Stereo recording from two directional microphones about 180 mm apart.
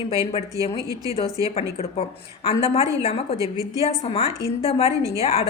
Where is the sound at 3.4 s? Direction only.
20° right (ahead or behind).